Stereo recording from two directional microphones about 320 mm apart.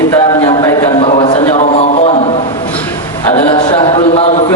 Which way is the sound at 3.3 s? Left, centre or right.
Centre.